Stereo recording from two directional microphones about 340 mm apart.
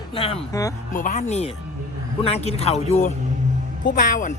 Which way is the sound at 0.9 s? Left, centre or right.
Left.